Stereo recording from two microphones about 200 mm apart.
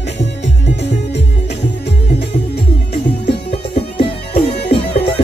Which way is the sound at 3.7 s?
30° left (ahead or behind).